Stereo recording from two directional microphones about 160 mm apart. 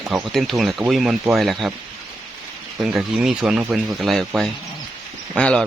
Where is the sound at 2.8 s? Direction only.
5° right (ahead or behind).